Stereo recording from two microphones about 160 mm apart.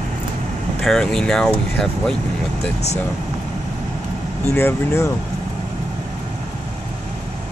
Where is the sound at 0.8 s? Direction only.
5° left (ahead or behind).